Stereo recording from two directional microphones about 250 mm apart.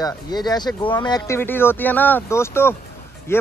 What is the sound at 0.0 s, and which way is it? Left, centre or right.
Speech, centre.